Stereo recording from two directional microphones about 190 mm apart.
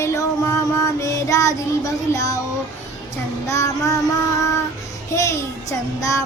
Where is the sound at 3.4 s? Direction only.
15° left (ahead or behind).